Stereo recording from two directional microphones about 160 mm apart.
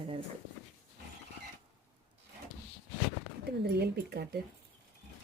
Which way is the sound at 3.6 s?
85° right.